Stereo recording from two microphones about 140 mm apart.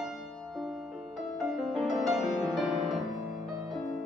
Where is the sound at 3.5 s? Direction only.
25° right (ahead or behind).